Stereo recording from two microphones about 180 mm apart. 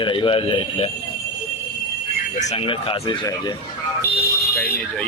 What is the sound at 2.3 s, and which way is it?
A man's voice, 40° left (ahead or behind).